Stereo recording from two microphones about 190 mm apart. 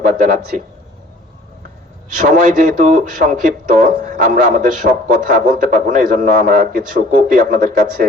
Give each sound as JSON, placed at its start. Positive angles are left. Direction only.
{"t": 2.1, "sound": "speech", "side_deg": -40}